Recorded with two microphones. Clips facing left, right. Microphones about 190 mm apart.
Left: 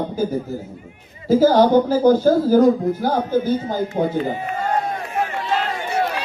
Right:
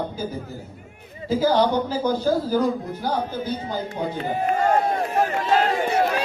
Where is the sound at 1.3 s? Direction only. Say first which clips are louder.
Left 6 dB; 45° left (ahead or behind).